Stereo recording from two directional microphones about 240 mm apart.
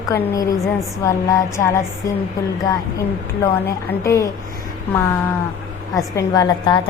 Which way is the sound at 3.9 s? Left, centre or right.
Centre.